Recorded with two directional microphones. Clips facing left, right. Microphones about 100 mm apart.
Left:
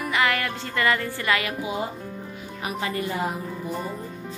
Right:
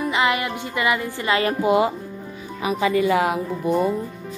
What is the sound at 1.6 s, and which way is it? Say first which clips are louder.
Speech: right 11 dB; 80° right.